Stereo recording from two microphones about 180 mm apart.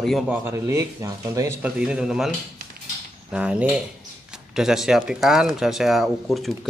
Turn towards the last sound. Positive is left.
turn(degrees=0)  # may be behind; listen again after turning